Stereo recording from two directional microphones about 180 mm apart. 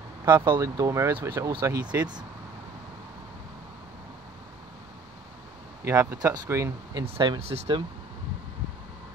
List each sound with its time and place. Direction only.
0.2 s speech: 20° right (ahead or behind)
5.9 s speech: 15° right (ahead or behind); by 7.8 s 30° right (ahead or behind)